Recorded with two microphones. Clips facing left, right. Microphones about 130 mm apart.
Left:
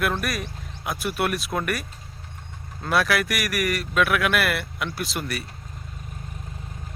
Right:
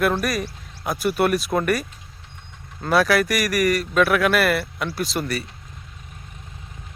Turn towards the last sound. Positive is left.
turn(degrees=0)  # may be behind; listen again after turning